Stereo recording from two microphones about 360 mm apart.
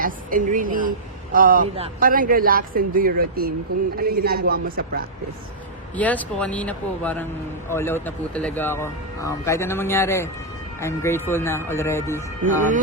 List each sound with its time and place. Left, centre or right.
0.0 s speech: right
6.0 s speech: centre
12.5 s speech: right